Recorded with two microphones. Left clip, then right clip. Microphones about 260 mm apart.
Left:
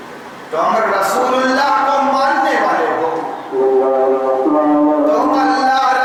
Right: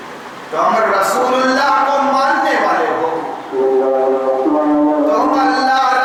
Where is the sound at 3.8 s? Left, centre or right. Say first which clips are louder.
Left 1 dB; centre.